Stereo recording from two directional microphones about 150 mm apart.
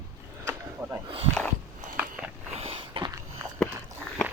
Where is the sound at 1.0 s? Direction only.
40° right (ahead or behind).